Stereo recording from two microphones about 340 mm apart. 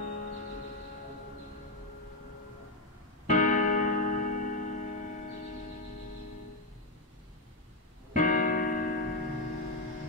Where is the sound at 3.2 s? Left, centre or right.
Left.